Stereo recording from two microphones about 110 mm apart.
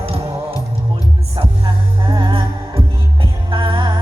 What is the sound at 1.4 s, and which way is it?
Music, 50° right (ahead or behind).